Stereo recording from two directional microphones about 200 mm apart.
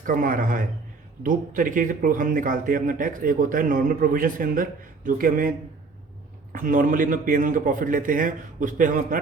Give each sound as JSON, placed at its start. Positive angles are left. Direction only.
{"t": 0.0, "sound": "a man's voice", "side_deg": -45}
{"t": 6.5, "sound": "a man's voice", "side_deg": -45}